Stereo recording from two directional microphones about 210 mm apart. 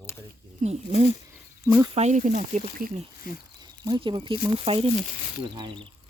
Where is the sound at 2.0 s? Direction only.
35° right (ahead or behind).